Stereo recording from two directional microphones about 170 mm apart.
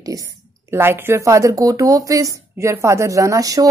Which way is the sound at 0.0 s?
20° right (ahead or behind).